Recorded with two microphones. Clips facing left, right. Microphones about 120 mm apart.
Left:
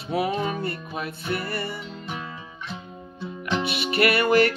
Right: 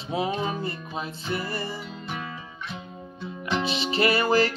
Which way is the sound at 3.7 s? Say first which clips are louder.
Left 1 dB; 25° right (ahead or behind).